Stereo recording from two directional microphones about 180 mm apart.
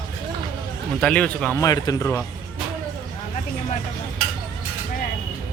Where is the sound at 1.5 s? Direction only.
20° left (ahead or behind).